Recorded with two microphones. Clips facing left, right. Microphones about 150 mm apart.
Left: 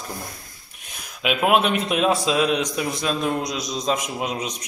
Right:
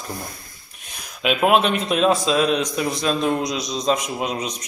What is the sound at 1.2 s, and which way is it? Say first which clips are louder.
Speech: right 2 dB; 5° left (ahead or behind).